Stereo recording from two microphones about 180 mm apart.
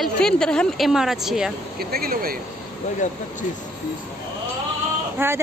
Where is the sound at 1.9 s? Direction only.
55° right (ahead or behind).